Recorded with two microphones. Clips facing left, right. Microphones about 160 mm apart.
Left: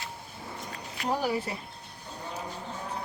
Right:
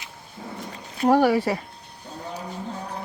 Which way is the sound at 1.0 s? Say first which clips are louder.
Right 11 dB; 75° right (ahead or behind).